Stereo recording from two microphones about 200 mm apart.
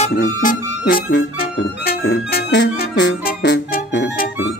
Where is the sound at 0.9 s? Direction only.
65° left (ahead or behind).